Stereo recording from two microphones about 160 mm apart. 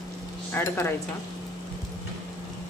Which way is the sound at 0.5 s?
15° left (ahead or behind).